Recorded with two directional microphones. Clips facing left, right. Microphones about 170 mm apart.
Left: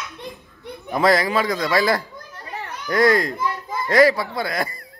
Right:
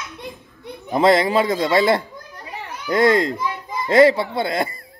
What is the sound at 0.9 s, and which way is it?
Speech, 25° right (ahead or behind).